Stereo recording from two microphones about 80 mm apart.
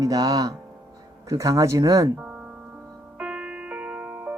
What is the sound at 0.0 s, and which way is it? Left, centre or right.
Speech, right.